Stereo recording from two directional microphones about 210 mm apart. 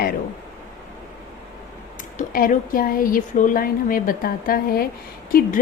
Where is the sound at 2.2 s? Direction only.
40° left (ahead or behind).